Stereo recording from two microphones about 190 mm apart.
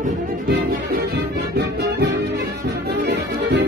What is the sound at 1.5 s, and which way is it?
Music, 60° right (ahead or behind).